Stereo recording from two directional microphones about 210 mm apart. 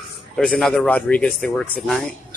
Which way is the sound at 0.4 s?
5° left (ahead or behind).